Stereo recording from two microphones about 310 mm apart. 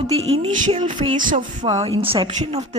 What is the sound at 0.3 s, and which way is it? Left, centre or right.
A woman's voice, centre.